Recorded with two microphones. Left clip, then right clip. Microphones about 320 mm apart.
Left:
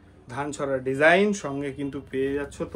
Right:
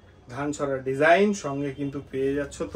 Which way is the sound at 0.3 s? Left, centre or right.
Left.